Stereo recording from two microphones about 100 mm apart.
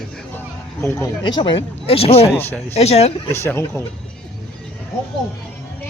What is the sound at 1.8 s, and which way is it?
Speech, 80° left.